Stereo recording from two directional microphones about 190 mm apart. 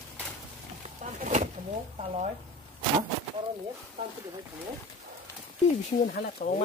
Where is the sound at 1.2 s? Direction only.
40° right (ahead or behind).